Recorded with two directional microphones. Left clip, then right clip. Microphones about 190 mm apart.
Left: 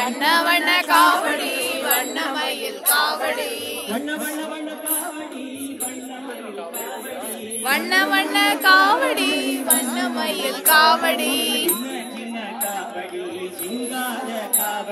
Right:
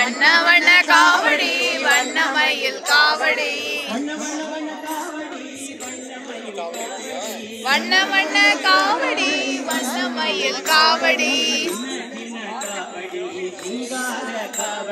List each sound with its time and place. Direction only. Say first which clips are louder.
0.0 s a capella: right 4 dB; 10° left (ahead or behind)
7.6 s speech: right 1 dB; 25° left (ahead or behind)
9.9 s music: right 2 dB; 30° left (ahead or behind)